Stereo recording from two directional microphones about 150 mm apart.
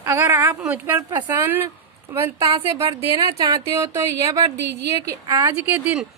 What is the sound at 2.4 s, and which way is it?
A woman's voice, 35° right (ahead or behind).